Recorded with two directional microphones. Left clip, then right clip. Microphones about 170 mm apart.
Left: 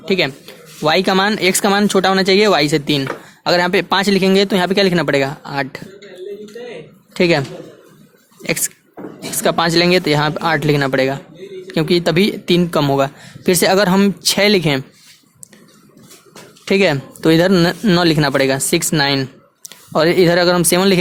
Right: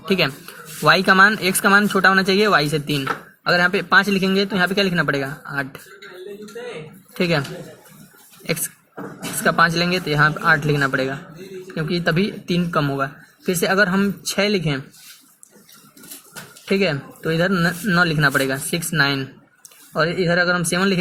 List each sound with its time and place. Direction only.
0.1 s speech: 25° left (ahead or behind)
7.2 s speech: 40° left (ahead or behind)
9.4 s speech: 45° left (ahead or behind)
16.6 s speech: 50° left (ahead or behind)
18.3 s speech: 45° left (ahead or behind)